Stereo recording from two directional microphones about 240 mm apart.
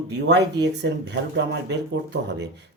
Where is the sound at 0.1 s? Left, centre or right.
Right.